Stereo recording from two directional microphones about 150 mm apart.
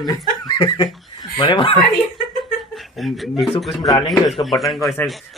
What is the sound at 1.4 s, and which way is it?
Speech, 35° left (ahead or behind).